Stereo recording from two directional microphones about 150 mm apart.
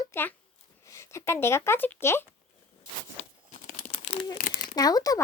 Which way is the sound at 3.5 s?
45° left (ahead or behind).